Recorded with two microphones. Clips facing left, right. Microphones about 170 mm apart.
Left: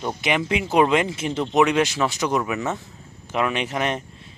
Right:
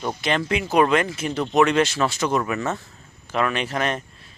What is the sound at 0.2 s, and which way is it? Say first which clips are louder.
Speech: left 1 dB; 15° left (ahead or behind).